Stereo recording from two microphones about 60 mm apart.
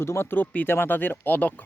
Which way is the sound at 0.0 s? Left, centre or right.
Left.